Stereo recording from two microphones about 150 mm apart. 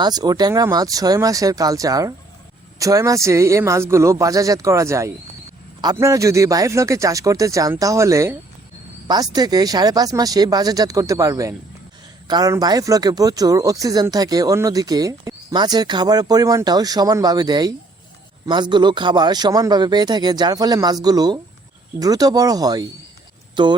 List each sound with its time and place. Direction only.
0.0 s speech: 25° right (ahead or behind)